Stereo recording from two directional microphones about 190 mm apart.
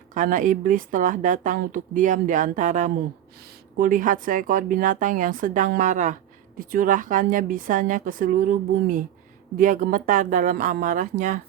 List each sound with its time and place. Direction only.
0.1 s a woman's voice: 40° right (ahead or behind)